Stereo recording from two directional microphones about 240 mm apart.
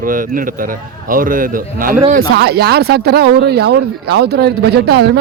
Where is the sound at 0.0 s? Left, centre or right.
Right.